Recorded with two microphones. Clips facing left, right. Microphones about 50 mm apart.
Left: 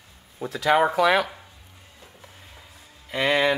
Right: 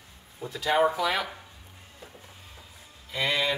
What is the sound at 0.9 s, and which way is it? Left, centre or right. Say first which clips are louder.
Speech: left 8 dB; left.